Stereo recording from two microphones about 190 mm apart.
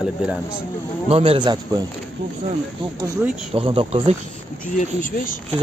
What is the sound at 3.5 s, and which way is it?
Speech, 30° right (ahead or behind).